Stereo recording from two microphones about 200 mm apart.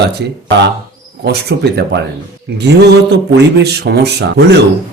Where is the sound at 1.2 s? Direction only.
55° right (ahead or behind).